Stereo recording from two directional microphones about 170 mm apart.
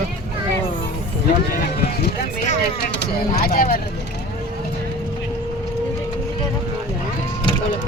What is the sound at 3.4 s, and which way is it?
Speech, 60° left (ahead or behind).